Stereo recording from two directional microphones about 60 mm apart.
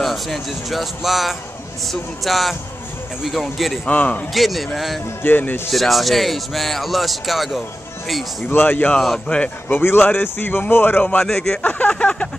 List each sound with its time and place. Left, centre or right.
0.0 s speech: centre
3.8 s speech: left
4.3 s speech: centre
5.2 s speech: left
5.7 s speech: centre
8.5 s speech: left
8.9 s speech: centre
9.7 s speech: left
11.2 s speech: centre
11.6 s speech: left